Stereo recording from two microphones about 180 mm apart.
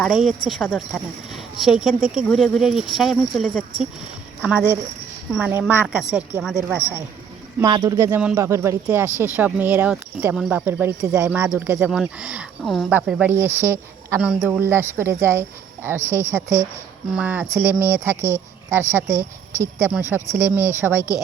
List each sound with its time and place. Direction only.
0.0 s speech: centre (ahead or behind)
7.6 s speech: 20° right (ahead or behind)